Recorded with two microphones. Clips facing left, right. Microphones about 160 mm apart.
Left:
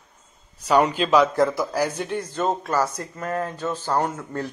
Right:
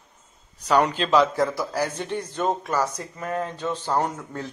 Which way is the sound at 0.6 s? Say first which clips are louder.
Left 2 dB; 10° left (ahead or behind).